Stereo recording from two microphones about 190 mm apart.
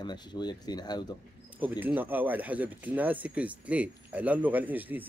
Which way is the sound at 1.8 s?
10° right (ahead or behind).